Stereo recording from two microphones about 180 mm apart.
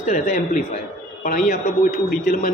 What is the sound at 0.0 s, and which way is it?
Speech, 40° left (ahead or behind).